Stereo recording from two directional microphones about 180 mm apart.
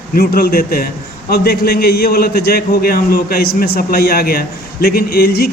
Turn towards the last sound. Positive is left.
turn(degrees=60)  # may be behind; listen again after turning